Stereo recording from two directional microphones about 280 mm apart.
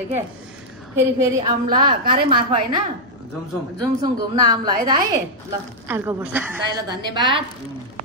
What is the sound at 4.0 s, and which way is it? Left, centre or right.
A woman's voice, centre.